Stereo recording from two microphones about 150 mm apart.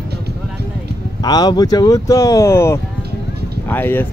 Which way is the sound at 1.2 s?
25° left (ahead or behind).